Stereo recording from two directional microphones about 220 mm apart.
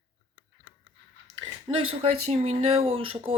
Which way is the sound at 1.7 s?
20° right (ahead or behind).